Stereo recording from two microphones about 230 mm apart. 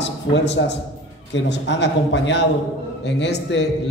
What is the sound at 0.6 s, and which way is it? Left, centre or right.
A man's voice, left.